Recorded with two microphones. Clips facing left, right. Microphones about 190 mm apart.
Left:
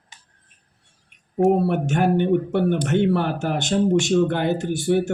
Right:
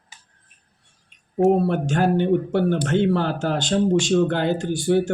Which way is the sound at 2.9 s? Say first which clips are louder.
Even; 20° left (ahead or behind).